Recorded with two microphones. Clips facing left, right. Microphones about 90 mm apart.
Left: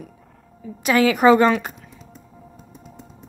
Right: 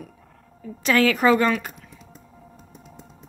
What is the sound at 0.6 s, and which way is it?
A woman's voice, 15° left (ahead or behind).